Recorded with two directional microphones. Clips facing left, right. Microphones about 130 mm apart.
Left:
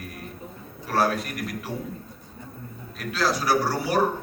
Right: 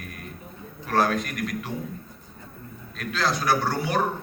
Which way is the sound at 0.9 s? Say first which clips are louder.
Right 1 dB; 5° left (ahead or behind).